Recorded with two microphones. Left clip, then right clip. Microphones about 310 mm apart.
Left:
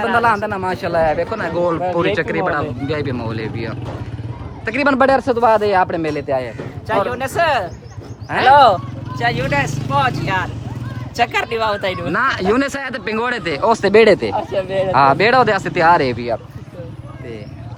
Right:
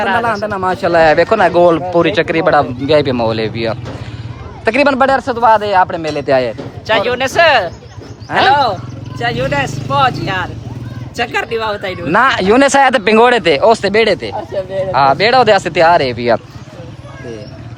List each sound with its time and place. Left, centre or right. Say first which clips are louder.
0.2 s speech: right 1 dB; centre
0.9 s speech: right 8 dB; right
1.3 s speech: right 10 dB; centre
6.4 s speech: right 8 dB; right
8.3 s speech: left 1 dB; centre
12.1 s speech: right 8 dB; centre